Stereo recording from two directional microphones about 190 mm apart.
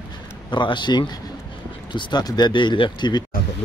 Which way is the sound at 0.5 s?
25° left (ahead or behind).